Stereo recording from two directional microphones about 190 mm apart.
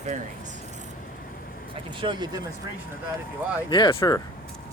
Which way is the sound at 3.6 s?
25° left (ahead or behind).